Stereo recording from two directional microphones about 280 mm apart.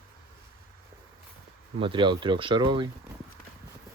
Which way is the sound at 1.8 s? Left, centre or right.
Centre.